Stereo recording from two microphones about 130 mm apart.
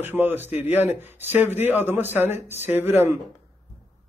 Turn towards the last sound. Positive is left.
turn(degrees=-15)  # may be behind; listen again after turning